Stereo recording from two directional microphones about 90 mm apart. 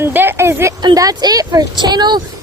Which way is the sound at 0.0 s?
25° right (ahead or behind).